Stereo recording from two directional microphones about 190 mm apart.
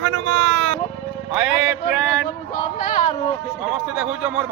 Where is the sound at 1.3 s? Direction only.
5° right (ahead or behind).